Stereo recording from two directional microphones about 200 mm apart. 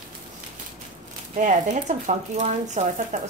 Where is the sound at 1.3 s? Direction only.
40° right (ahead or behind).